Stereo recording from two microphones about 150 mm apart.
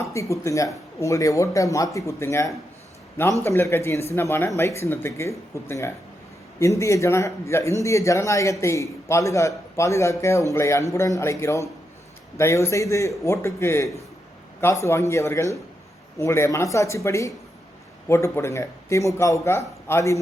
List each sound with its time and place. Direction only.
0.0 s a man's voice: 20° left (ahead or behind)